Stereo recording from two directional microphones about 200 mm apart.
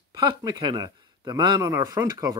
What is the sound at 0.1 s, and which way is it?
Speech, 20° right (ahead or behind).